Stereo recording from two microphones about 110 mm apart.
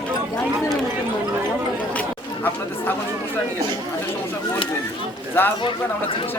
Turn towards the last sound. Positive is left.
turn(degrees=20)  # may be behind; listen again after turning